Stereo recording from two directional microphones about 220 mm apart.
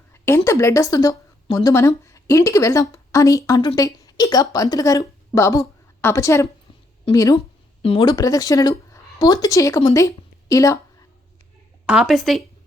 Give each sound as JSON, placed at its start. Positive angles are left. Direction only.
{"t": 0.1, "sound": "a woman's voice", "side_deg": 10}
{"t": 11.9, "sound": "speech", "side_deg": 0}